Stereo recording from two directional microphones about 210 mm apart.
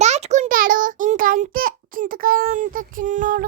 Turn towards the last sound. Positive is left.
turn(degrees=-40)  # may be behind; listen again after turning